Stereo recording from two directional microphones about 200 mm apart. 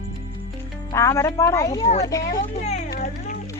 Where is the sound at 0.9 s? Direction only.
15° left (ahead or behind).